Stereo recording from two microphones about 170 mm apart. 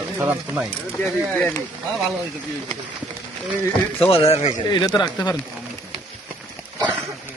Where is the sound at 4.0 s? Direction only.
35° left (ahead or behind).